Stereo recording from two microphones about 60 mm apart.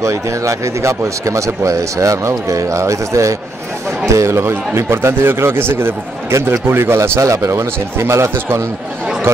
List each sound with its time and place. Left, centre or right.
0.0 s speech: right
4.1 s speech: right
7.2 s speech: right